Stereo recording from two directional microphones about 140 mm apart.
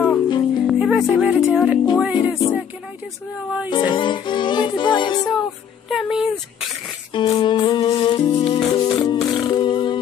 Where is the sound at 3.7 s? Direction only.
35° left (ahead or behind).